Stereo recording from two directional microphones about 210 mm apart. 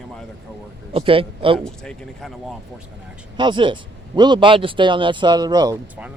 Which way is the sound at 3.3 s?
20° right (ahead or behind).